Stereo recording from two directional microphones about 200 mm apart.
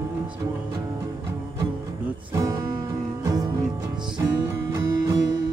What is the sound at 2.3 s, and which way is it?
Music, 15° right (ahead or behind).